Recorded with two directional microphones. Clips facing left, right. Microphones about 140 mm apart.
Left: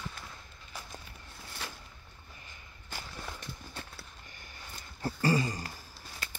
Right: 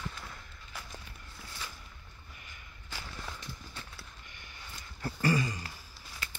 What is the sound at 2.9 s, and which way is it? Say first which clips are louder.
Walk: left 1 dB; 50° left (ahead or behind).